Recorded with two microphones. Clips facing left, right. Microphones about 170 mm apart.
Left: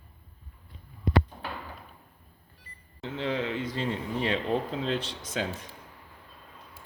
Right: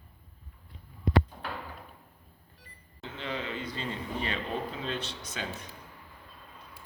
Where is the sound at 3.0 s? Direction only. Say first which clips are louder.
Left 6 dB; 80° left.